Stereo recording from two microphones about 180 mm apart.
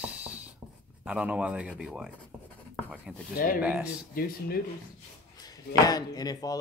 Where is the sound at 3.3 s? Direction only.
50° left (ahead or behind).